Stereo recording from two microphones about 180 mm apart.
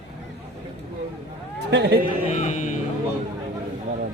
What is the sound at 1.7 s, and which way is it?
Speech, 70° right (ahead or behind).